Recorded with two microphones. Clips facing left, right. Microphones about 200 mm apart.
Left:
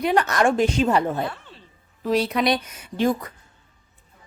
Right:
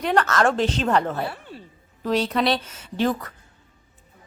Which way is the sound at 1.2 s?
10° right (ahead or behind).